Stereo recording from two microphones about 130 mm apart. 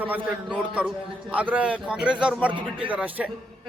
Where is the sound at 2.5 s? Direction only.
40° right (ahead or behind).